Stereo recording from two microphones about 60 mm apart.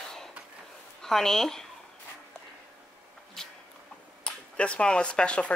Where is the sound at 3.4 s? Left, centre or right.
Centre.